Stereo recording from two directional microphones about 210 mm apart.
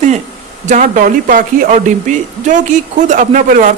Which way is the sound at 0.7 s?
40° right (ahead or behind).